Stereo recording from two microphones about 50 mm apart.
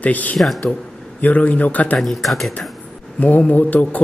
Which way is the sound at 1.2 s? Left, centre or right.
Left.